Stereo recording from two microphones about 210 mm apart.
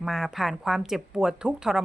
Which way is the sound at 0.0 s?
Centre (ahead or behind).